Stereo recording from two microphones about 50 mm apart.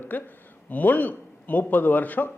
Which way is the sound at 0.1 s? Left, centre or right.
Left.